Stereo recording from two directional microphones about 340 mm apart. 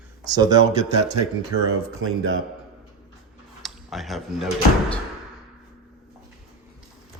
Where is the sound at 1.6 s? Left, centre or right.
Right.